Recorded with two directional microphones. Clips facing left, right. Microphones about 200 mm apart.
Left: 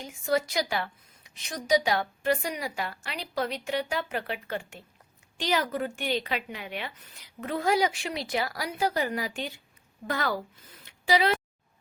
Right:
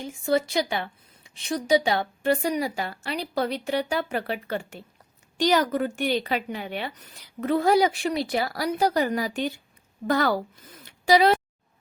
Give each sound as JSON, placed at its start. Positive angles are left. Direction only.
{"t": 0.0, "sound": "a woman's voice", "side_deg": -30}